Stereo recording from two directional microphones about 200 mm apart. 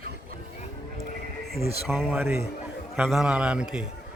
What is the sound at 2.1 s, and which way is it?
Speech, 10° right (ahead or behind).